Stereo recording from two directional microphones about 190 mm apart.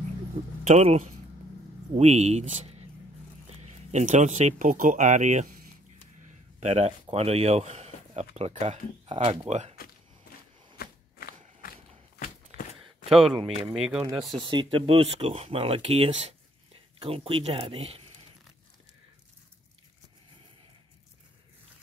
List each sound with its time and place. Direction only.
0.7 s speech: 35° right (ahead or behind)
10.8 s a sound: 55° left (ahead or behind)
12.2 s walk: 50° left (ahead or behind)
13.1 s speech: centre (ahead or behind)
14.4 s speech: 25° right (ahead or behind)